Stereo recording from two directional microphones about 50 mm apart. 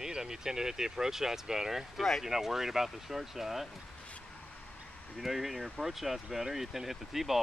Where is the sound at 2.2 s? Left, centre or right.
Centre.